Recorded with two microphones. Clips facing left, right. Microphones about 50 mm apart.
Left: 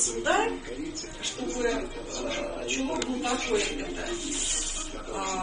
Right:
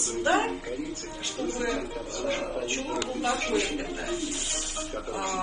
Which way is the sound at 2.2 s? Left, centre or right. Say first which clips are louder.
Right 2 dB; right.